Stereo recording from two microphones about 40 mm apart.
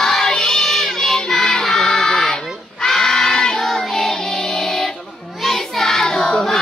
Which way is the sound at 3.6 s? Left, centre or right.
Centre.